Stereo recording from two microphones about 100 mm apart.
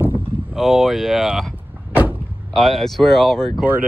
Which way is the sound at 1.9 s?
20° right (ahead or behind).